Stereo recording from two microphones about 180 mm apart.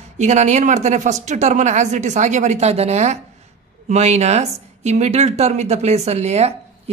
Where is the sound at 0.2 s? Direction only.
40° right (ahead or behind).